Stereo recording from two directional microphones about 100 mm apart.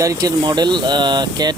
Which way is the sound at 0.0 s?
35° right (ahead or behind).